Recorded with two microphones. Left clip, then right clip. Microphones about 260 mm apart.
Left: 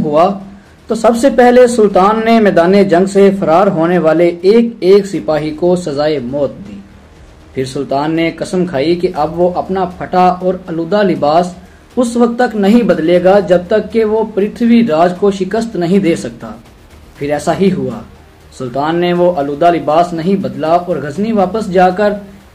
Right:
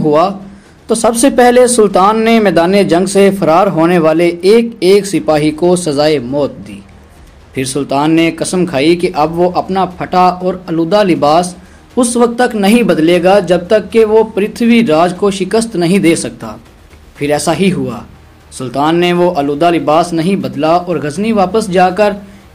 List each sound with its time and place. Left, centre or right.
0.8 s speech: right
7.5 s speech: right